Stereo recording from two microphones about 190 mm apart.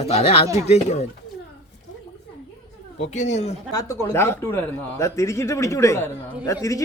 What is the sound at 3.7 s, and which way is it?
A woman's voice, 20° left (ahead or behind).